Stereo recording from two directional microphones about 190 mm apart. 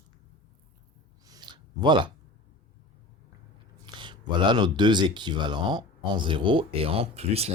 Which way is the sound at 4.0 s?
25° right (ahead or behind).